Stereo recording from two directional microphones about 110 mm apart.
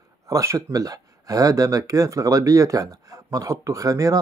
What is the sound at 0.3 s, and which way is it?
Speech, 30° right (ahead or behind).